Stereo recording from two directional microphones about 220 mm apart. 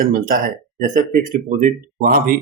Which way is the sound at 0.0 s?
40° right (ahead or behind).